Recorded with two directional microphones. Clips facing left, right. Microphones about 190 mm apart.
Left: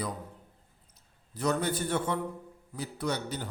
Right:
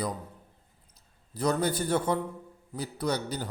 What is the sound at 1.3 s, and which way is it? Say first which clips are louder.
Speech: right 2 dB; 35° right (ahead or behind).